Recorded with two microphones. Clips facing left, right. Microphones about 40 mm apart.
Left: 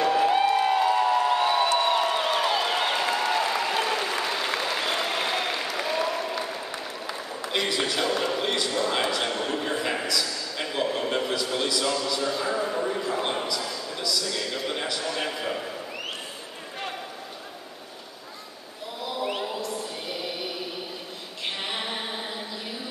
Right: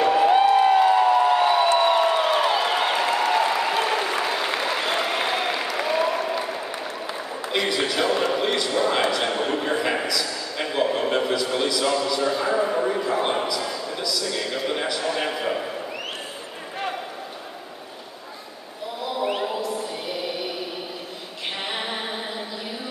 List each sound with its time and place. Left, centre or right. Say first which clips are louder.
0.0 s music: right 4 dB; centre
1.7 s a sound: right 4 dB; right
7.5 s a man's voice: right 3 dB; centre
19.0 s chant: right 4 dB; centre
21.6 s a capella: right 4 dB; centre